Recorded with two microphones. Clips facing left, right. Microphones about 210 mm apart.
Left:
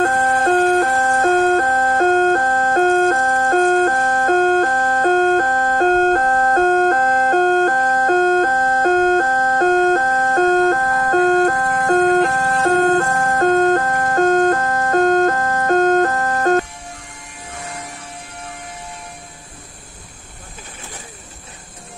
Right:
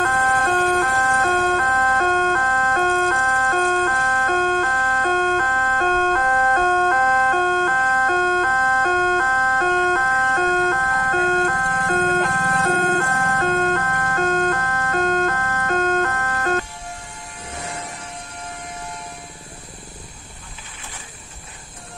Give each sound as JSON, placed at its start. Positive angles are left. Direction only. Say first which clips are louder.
{"t": 0.0, "sound": "music", "louder": "left 5 dB", "side_deg": 40}